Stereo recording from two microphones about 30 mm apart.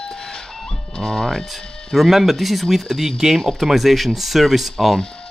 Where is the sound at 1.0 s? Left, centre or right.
Left.